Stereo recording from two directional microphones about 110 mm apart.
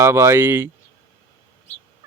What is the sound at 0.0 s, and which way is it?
Speech, 25° right (ahead or behind).